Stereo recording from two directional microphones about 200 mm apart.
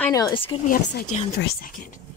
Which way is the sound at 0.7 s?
45° left (ahead or behind).